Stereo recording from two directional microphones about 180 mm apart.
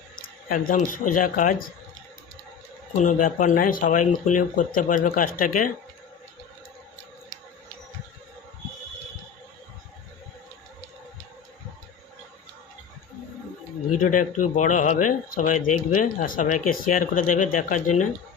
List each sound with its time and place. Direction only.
0.4 s speech: 50° left (ahead or behind)
2.9 s speech: 45° left (ahead or behind)
14.0 s speech: 45° left (ahead or behind)